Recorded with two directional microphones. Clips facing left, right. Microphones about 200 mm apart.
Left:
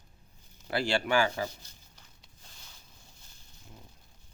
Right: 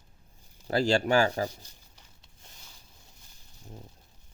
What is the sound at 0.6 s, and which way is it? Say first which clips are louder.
Speech: right 5 dB; 40° right (ahead or behind).